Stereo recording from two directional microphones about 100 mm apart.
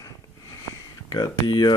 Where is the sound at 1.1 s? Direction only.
45° left (ahead or behind).